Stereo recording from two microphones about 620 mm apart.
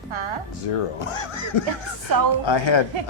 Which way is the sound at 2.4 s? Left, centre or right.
Left.